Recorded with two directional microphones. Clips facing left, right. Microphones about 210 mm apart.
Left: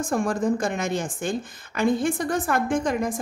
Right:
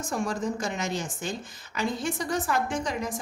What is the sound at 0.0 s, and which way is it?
A woman's voice, 55° left (ahead or behind).